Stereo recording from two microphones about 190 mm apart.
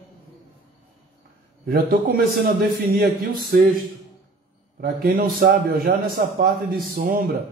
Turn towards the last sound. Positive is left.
turn(degrees=-50)  # may be behind; listen again after turning